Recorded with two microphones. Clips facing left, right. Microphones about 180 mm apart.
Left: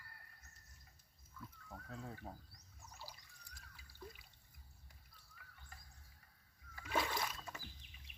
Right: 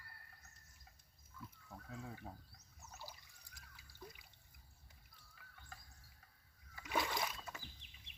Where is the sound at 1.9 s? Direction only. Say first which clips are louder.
Even; 5° right (ahead or behind).